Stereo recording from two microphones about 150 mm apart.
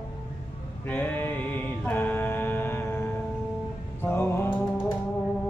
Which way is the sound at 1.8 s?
15° left (ahead or behind).